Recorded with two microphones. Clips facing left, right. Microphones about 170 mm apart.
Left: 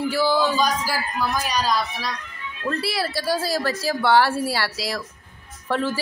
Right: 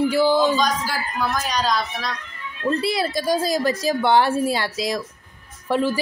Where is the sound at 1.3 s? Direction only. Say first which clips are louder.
Even; 10° left (ahead or behind).